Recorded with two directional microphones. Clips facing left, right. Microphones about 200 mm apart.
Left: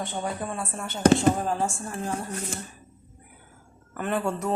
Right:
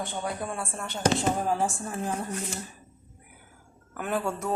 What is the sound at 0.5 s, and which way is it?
Speech, centre (ahead or behind).